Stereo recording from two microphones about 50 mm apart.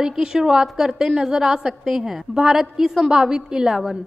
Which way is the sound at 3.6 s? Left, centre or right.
Centre.